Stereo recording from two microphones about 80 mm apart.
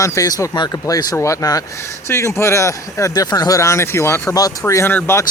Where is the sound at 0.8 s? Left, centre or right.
Left.